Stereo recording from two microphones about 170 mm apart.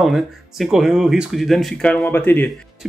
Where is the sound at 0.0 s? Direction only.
Centre (ahead or behind).